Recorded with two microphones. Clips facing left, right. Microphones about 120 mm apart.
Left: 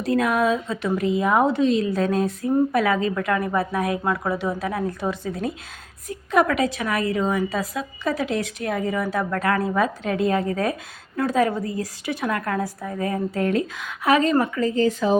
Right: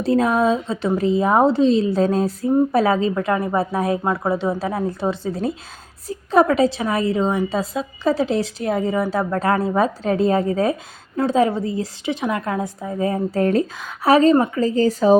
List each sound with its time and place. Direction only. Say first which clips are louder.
0.0 s a woman's voice: right 3 dB; 30° right (ahead or behind)
14.3 s a woman's voice: right 3 dB; 20° right (ahead or behind)
14.6 s speech: right 3 dB; 35° right (ahead or behind)